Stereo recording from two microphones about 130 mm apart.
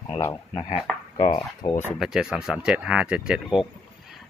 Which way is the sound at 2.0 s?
5° right (ahead or behind).